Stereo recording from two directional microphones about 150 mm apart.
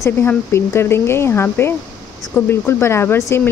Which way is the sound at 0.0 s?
15° left (ahead or behind).